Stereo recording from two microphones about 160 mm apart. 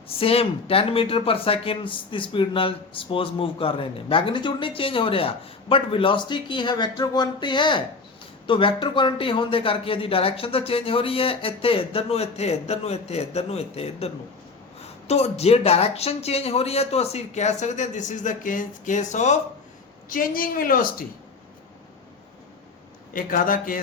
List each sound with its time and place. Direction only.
0.2 s speech: 35° left (ahead or behind)
20.1 s a woman's voice: 60° left (ahead or behind)
23.1 s a woman's voice: 60° left (ahead or behind)